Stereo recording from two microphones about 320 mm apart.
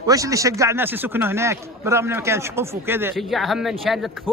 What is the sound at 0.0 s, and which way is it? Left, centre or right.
Speech, centre.